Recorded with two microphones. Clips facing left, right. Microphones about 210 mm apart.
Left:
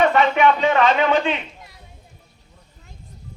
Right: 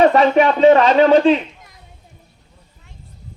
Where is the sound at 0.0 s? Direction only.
35° right (ahead or behind).